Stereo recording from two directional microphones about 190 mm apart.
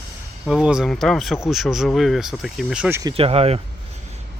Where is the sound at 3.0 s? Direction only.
25° right (ahead or behind).